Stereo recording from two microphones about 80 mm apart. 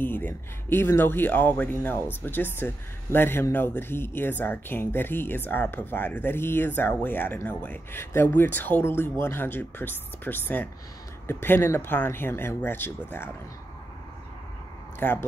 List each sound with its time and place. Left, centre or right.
0.0 s speech: left
15.0 s speech: left